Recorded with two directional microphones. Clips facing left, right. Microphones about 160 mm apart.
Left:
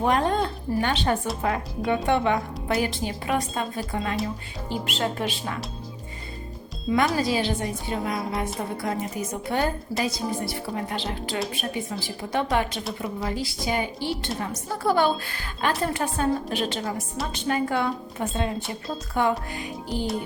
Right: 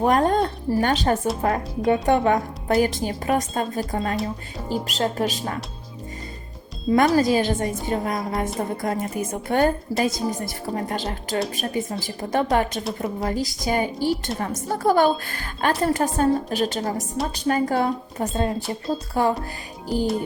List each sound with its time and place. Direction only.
0.0 s a woman's voice: 45° right (ahead or behind)
6.9 s a woman's voice: 45° right (ahead or behind)
9.5 s a woman's voice: 50° right (ahead or behind); by 19.3 s 35° right (ahead or behind)
19.9 s speech: centre (ahead or behind)